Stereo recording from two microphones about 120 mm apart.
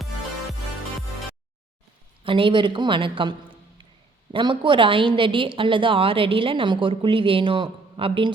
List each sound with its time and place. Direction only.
2.2 s a woman's voice: 45° right (ahead or behind)